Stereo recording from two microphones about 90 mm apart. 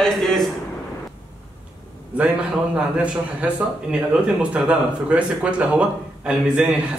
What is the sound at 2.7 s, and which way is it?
A man's voice, 15° right (ahead or behind).